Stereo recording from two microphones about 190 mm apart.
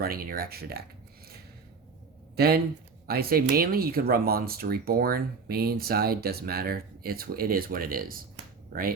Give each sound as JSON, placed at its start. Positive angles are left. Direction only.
{"t": 0.0, "sound": "speech", "side_deg": -50}
{"t": 2.3, "sound": "speech", "side_deg": -55}